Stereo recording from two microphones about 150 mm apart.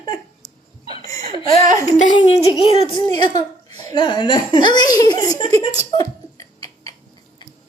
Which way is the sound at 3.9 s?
30° left (ahead or behind).